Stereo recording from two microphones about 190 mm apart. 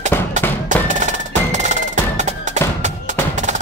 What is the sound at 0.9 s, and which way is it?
Music, 40° right (ahead or behind).